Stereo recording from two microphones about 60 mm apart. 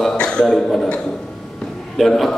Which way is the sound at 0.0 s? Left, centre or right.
Centre.